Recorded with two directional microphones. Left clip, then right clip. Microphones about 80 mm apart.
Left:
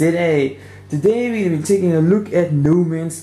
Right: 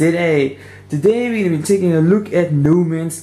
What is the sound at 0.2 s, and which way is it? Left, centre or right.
Speech, centre.